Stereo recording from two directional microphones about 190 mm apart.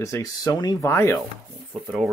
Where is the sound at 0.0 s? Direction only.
15° left (ahead or behind).